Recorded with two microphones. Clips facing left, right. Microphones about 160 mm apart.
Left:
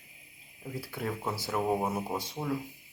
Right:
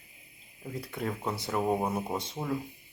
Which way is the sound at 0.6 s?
Centre (ahead or behind).